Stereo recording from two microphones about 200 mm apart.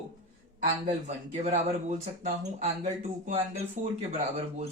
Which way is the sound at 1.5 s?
35° right (ahead or behind).